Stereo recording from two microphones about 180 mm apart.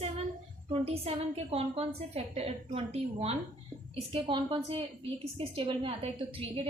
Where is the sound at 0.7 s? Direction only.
30° right (ahead or behind).